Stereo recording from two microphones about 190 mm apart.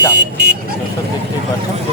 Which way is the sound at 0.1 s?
60° right (ahead or behind).